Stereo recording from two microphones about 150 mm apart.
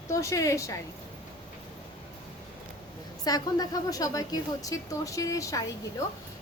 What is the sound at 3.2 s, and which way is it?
A woman's voice, 25° left (ahead or behind).